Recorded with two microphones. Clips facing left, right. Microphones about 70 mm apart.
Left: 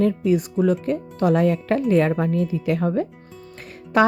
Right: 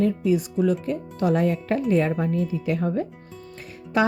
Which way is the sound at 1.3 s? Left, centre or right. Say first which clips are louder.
Left 3 dB; left.